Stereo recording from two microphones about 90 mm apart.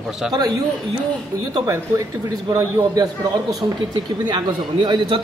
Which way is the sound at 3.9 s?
55° right (ahead or behind).